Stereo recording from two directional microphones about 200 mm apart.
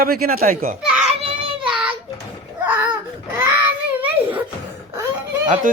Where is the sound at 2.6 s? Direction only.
10° right (ahead or behind).